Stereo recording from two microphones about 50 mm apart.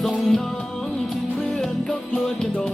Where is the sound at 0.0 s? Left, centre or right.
Centre.